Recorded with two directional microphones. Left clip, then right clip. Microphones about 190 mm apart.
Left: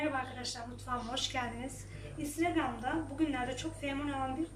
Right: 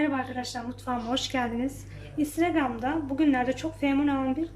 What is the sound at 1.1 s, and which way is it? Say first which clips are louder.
A woman's voice: right 9 dB; 45° right (ahead or behind).